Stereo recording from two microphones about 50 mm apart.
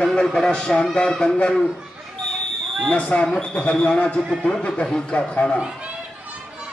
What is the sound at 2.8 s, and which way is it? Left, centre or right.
Speech, left.